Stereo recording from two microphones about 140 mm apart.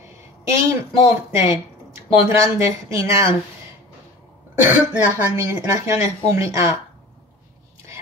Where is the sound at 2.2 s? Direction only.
20° right (ahead or behind).